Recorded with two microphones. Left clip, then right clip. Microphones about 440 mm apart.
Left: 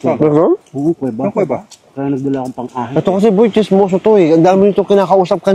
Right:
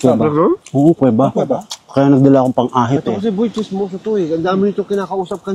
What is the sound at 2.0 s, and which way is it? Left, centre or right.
Speech, right.